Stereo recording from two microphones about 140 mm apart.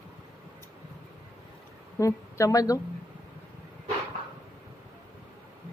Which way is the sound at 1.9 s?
20° left (ahead or behind).